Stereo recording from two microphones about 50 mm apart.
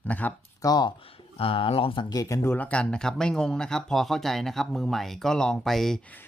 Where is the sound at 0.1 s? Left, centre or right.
Left.